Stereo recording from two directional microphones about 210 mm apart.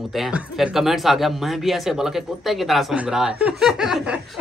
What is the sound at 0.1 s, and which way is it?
Speech, 5° right (ahead or behind).